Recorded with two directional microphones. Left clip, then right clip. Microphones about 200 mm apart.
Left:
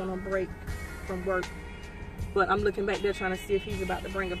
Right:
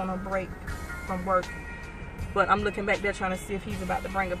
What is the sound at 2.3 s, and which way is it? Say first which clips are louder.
Speech: right 2 dB; 15° right (ahead or behind).